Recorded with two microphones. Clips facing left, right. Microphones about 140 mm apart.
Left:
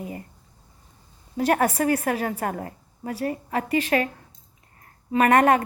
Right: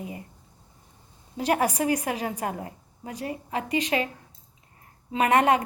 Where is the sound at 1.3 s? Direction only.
15° right (ahead or behind).